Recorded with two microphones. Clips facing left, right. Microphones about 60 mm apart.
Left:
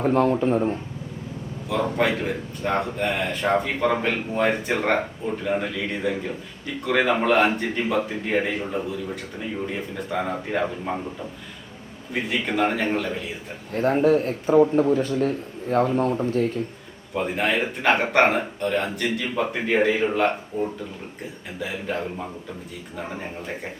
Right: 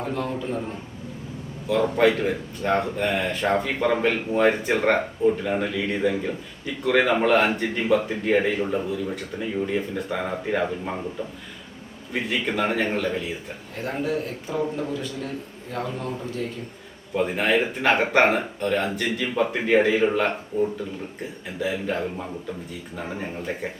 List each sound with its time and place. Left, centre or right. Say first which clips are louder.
0.0 s speech: left 8 dB; left
2.2 s speech: right 2 dB; centre
12.1 s speech: left 1 dB; centre
13.7 s a man's voice: left 8 dB; left
17.2 s speech: right 2 dB; centre
20.5 s speech: right 3 dB; centre
21.6 s speech: right 2 dB; centre